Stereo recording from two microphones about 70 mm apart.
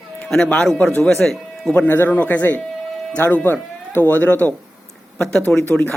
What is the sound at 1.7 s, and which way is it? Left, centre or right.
Speech, left.